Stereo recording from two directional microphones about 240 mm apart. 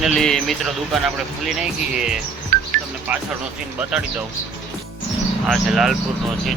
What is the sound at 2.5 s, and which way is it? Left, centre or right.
Music, right.